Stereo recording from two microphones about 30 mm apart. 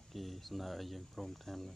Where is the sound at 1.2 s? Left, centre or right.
Centre.